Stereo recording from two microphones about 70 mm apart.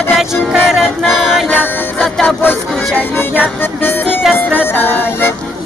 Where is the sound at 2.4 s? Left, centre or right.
Left.